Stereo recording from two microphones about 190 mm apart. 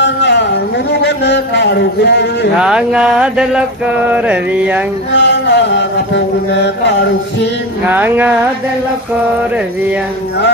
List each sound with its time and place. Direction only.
0.0 s a sound: 65° left (ahead or behind)
1.0 s a man's voice: 65° left (ahead or behind)
2.6 s mantra: 5° right (ahead or behind)
5.1 s chant: 65° left (ahead or behind)
7.8 s mantra: 10° right (ahead or behind)